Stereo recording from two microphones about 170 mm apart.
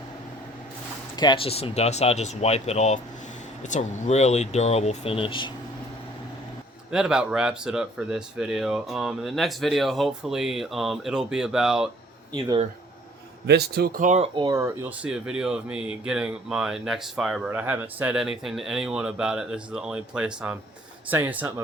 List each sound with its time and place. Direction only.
1.1 s speech: 25° left (ahead or behind)
6.9 s speech: 5° right (ahead or behind)
12.3 s speech: 30° right (ahead or behind)
13.5 s speech: 70° right (ahead or behind); by 14.3 s 45° right (ahead or behind)
14.5 s speech: 10° right (ahead or behind)